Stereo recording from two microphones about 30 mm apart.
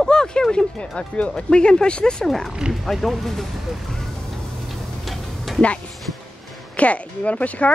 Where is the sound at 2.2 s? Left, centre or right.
Centre.